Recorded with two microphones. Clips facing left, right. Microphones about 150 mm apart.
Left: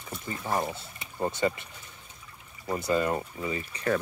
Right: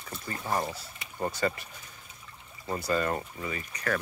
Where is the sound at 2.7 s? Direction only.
15° left (ahead or behind).